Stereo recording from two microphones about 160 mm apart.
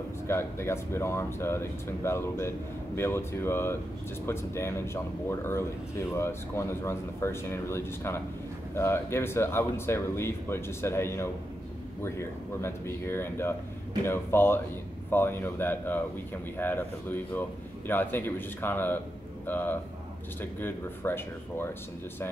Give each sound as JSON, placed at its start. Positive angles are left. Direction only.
{"t": 0.3, "sound": "speech", "side_deg": 15}